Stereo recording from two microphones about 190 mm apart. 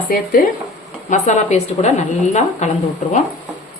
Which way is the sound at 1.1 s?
40° left (ahead or behind).